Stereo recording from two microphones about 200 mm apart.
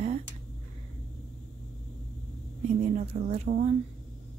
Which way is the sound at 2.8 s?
35° right (ahead or behind).